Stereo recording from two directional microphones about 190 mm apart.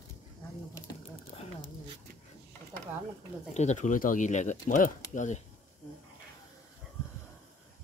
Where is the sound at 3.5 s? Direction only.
35° left (ahead or behind).